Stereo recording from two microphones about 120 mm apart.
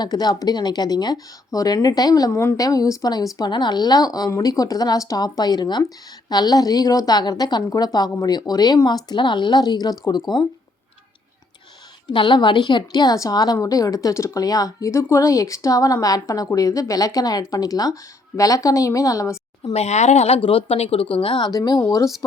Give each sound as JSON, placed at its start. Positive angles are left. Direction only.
{"t": 0.0, "sound": "a woman's voice", "side_deg": 35}
{"t": 12.0, "sound": "a woman's voice", "side_deg": 40}
{"t": 19.7, "sound": "speech", "side_deg": 65}
{"t": 21.5, "sound": "a woman's voice", "side_deg": 30}